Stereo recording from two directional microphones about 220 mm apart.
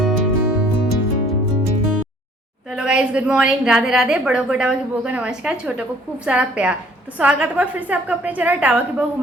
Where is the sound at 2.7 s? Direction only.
5° right (ahead or behind).